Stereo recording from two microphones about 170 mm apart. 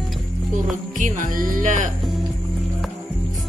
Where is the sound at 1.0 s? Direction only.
50° right (ahead or behind).